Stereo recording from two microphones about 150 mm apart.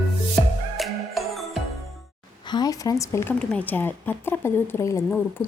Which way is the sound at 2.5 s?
25° left (ahead or behind).